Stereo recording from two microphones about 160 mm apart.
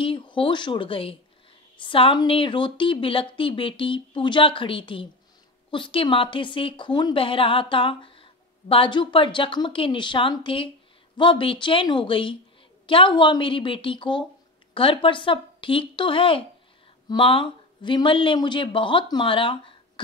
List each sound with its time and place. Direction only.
0.0 s a woman's voice: 30° left (ahead or behind)